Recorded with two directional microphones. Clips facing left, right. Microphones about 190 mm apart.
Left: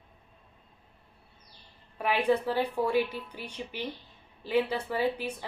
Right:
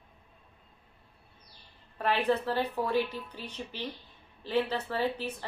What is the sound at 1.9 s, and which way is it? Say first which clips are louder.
A woman's voice: left 2 dB; 10° left (ahead or behind).